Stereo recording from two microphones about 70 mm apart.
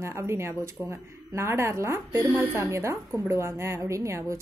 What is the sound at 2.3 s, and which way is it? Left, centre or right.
Speech, right.